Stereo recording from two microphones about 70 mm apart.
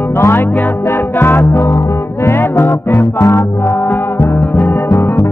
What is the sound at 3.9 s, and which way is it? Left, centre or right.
Music, left.